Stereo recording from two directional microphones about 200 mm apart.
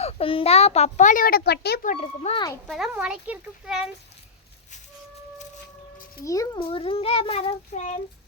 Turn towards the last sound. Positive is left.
turn(degrees=35)  # may be behind; listen again after turning